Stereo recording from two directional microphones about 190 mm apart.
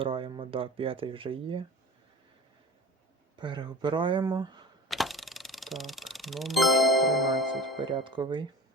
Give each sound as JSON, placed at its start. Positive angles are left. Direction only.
{"t": 0.0, "sound": "speech", "side_deg": -30}
{"t": 3.3, "sound": "speech", "side_deg": -25}
{"t": 4.9, "sound": "music", "side_deg": 0}
{"t": 7.8, "sound": "speech", "side_deg": -25}